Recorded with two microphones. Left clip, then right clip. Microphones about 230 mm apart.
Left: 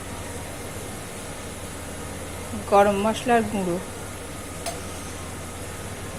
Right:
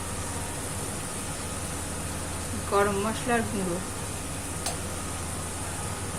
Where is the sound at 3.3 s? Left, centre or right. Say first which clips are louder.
Left 7 dB; left.